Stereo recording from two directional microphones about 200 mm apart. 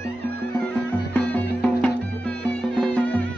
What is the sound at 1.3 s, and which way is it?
Music, 10° left (ahead or behind).